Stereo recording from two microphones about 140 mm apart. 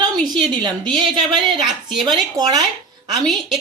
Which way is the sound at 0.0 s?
30° right (ahead or behind).